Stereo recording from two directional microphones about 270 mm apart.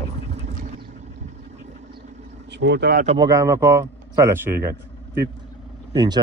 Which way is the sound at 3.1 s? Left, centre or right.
Centre.